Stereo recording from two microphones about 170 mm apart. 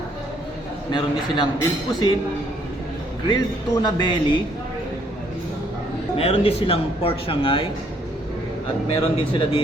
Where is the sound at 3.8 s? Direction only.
25° left (ahead or behind).